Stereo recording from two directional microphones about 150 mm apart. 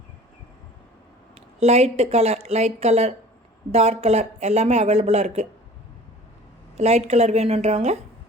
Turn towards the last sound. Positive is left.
turn(degrees=-45)  # may be behind; listen again after turning